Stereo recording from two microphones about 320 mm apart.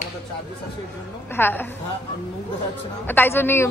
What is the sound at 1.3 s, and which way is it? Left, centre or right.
Speech, centre.